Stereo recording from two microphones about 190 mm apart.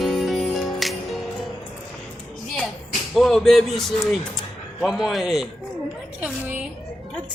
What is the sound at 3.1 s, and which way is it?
A man's voice, centre (ahead or behind).